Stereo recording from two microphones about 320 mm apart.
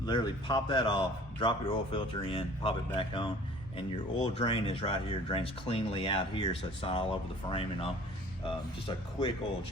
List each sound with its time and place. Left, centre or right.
0.0 s speech: centre